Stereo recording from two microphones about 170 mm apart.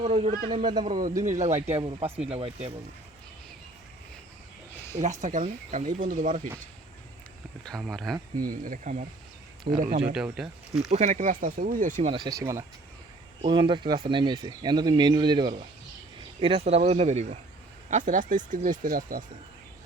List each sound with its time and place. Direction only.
0.0 s speech: 40° right (ahead or behind)
0.5 s speech: 25° right (ahead or behind)
0.9 s speech: 50° right (ahead or behind)
1.7 s speech: 35° right (ahead or behind)
5.2 s speech: 45° right (ahead or behind)
7.6 s speech: centre (ahead or behind)
8.4 s speech: 55° right (ahead or behind)
10.3 s speech: 5° right (ahead or behind)
10.9 s speech: 45° right (ahead or behind)
12.0 s speech: 30° right (ahead or behind); by 19.2 s 55° right (ahead or behind)